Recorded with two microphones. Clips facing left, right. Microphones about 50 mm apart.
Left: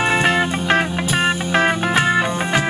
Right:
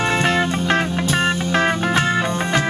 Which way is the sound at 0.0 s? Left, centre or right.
Centre.